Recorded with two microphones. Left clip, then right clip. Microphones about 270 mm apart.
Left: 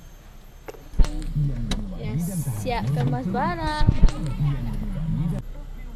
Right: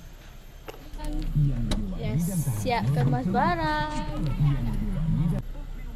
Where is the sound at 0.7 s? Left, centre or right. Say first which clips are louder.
Left 3 dB; centre.